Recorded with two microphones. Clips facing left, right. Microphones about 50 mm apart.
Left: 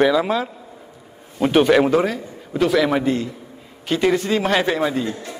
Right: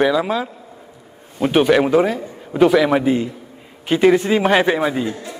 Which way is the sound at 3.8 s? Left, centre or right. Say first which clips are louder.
Right 5 dB; centre.